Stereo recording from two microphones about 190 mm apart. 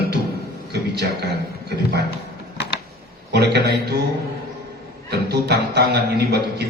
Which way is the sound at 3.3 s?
60° right (ahead or behind).